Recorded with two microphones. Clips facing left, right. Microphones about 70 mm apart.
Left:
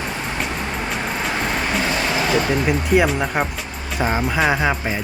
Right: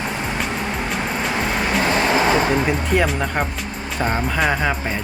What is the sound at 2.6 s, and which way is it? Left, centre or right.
Speech, centre.